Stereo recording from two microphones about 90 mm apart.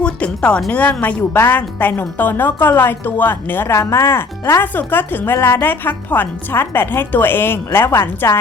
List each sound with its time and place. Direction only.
0.0 s speech: 10° left (ahead or behind)